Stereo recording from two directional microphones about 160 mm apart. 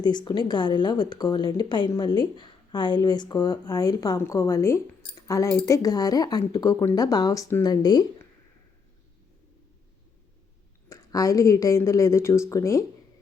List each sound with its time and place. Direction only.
0.0 s speech: 25° left (ahead or behind)
10.8 s speech: 20° left (ahead or behind)